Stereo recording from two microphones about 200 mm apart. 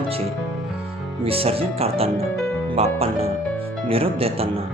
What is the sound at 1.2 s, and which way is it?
Speech, 30° right (ahead or behind).